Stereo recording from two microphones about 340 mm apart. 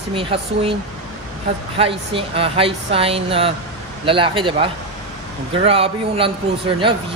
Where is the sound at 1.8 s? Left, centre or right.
Centre.